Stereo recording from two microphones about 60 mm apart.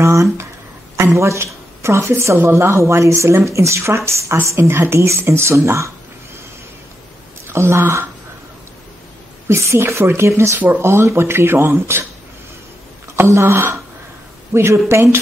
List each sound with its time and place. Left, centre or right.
0.0 s a sound: right
0.9 s a woman's voice: right
7.4 s speech: right
9.5 s speech: right
13.1 s speech: right